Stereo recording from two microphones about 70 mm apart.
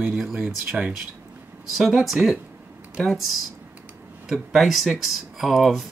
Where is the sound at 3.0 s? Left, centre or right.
Centre.